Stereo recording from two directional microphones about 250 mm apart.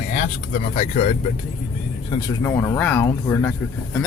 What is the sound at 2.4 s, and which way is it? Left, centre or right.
Speech, centre.